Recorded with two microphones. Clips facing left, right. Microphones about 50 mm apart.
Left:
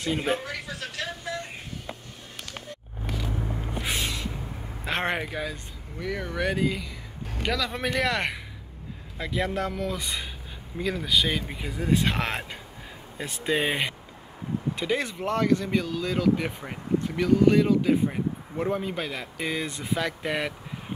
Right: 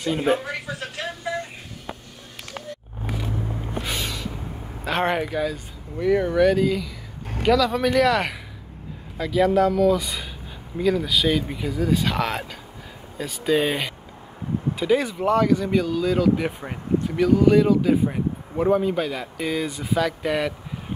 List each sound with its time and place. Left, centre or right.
0.2 s a sound: right
3.8 s a sound: centre
4.8 s speech: centre
5.9 s speech: centre
6.3 s speech: centre
14.8 s speech: centre